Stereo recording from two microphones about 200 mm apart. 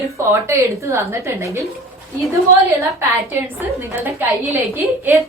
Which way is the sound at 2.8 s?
15° right (ahead or behind).